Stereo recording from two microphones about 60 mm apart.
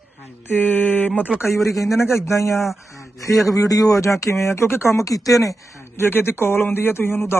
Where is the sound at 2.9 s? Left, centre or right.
Left.